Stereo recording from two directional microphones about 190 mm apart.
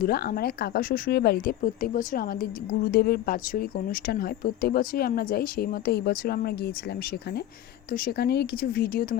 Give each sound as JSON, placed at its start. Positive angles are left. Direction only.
{"t": 0.0, "sound": "speech", "side_deg": 55}